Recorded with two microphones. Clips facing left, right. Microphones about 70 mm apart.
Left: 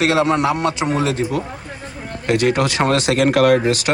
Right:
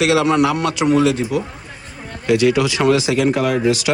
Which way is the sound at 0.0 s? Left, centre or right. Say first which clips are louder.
Right 1 dB; left.